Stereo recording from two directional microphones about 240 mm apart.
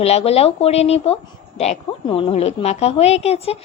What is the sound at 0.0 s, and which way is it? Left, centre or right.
Speech, left.